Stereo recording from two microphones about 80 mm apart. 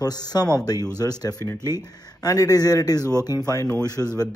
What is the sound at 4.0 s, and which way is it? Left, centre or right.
Speech, left.